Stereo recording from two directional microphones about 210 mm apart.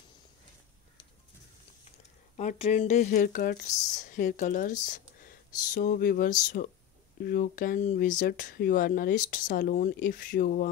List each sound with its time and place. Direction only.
2.3 s speech: 30° left (ahead or behind)